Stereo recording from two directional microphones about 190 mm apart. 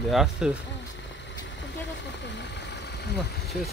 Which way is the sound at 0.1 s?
5° right (ahead or behind).